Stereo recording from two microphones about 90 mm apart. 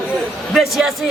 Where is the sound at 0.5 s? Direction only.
Centre (ahead or behind).